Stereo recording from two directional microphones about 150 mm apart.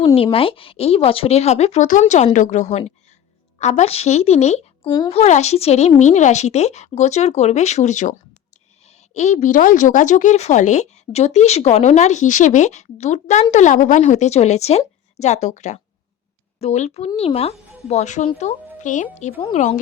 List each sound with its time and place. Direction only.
0.0 s a woman's voice: 35° left (ahead or behind)
4.9 s a woman's voice: 25° left (ahead or behind)
5.1 s a woman's voice: 45° left (ahead or behind)